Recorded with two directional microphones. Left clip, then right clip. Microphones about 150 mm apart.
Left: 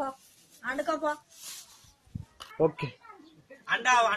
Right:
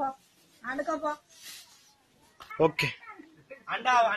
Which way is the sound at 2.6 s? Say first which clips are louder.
Right 2 dB; 5° right (ahead or behind).